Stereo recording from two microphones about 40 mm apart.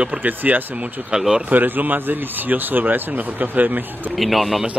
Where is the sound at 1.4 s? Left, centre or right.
Right.